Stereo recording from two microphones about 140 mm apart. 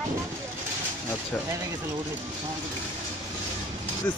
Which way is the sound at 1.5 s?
25° right (ahead or behind).